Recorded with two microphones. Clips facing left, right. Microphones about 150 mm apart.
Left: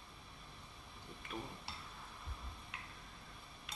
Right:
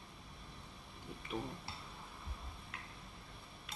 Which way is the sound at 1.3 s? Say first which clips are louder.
Right 4 dB; 15° right (ahead or behind).